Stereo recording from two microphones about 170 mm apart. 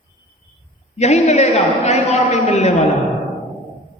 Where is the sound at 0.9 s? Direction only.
40° left (ahead or behind).